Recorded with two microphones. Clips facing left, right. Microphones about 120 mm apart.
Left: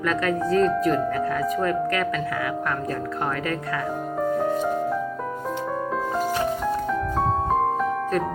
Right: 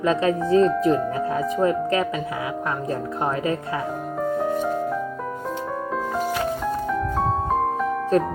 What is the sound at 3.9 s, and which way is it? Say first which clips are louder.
Music: left 2 dB; centre (ahead or behind).